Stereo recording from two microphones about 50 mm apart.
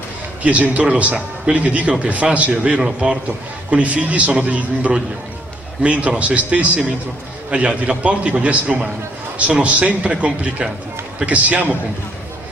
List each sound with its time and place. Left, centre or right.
0.4 s a man's voice: right